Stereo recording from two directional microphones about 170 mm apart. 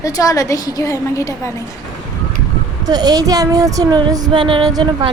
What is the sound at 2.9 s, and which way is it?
Speech, 25° right (ahead or behind).